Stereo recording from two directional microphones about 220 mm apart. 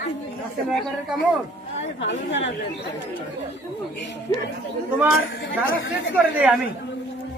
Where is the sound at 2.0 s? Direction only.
55° left (ahead or behind).